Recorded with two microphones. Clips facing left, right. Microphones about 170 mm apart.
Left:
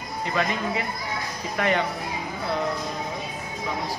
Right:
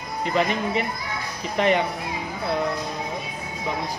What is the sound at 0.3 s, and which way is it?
Speech, 25° right (ahead or behind).